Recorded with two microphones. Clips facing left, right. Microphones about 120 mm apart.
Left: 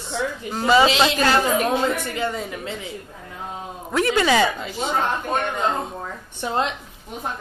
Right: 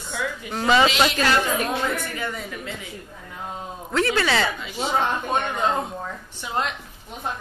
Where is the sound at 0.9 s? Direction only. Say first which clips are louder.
Left 2 dB; 25° left (ahead or behind).